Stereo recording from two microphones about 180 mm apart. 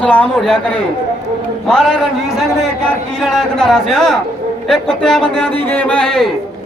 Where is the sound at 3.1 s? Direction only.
Centre (ahead or behind).